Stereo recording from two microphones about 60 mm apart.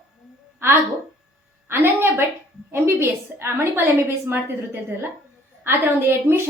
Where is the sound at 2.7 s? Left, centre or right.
Right.